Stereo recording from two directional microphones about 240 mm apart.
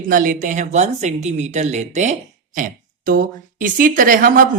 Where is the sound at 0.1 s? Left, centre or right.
Right.